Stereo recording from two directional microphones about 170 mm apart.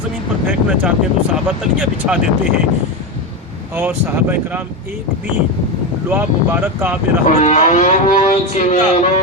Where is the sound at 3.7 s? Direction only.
10° right (ahead or behind).